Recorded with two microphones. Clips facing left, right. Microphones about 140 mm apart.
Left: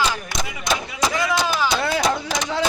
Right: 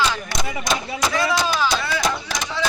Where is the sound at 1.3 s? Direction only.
15° left (ahead or behind).